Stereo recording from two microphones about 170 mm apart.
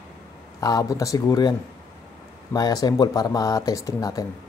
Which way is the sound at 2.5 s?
20° left (ahead or behind).